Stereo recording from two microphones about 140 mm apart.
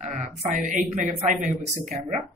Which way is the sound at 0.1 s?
65° right (ahead or behind).